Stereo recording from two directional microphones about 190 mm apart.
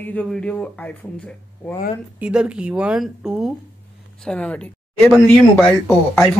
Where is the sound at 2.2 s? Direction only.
5° right (ahead or behind).